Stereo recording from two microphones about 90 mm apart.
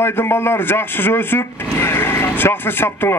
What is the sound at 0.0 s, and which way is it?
A man's voice, 25° left (ahead or behind).